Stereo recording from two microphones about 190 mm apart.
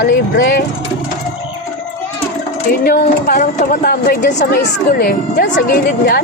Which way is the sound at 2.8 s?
45° left (ahead or behind).